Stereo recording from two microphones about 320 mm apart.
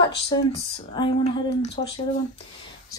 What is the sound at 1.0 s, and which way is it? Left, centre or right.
Speech, centre.